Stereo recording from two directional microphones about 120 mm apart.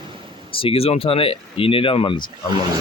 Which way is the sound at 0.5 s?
50° left (ahead or behind).